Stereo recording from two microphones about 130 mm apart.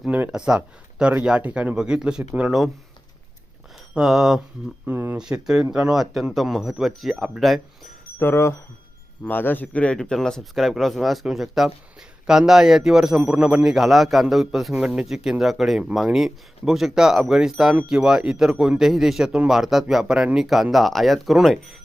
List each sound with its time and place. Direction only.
0.0 s a man's voice: 10° right (ahead or behind)
3.9 s a man's voice: 5° right (ahead or behind)
4.9 s a man's voice: 15° right (ahead or behind)
8.2 s a man's voice: 20° left (ahead or behind); by 21.8 s centre (ahead or behind)